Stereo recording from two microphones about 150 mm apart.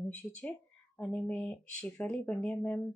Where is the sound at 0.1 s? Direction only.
10° left (ahead or behind).